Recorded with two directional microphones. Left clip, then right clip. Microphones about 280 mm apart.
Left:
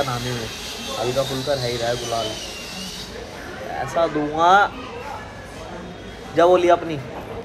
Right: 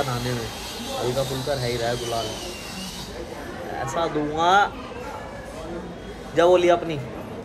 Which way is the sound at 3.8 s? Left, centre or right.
Centre.